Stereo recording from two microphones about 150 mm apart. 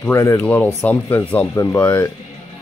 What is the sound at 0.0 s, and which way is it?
Speech, 15° left (ahead or behind).